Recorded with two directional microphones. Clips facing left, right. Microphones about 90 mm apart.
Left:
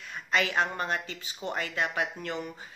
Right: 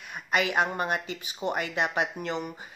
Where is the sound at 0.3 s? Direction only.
15° right (ahead or behind).